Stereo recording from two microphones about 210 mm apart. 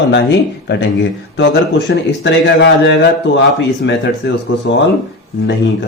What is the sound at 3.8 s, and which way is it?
Speech, 60° left (ahead or behind).